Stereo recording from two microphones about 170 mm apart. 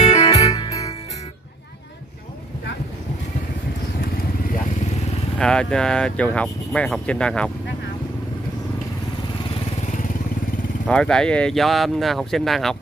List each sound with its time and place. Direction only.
0.3 s music: 40° left (ahead or behind)
0.6 s music: 20° left (ahead or behind)
4.0 s motorcycle: 50° left (ahead or behind)
5.4 s speech: 5° left (ahead or behind)
10.9 s speech: 5° left (ahead or behind)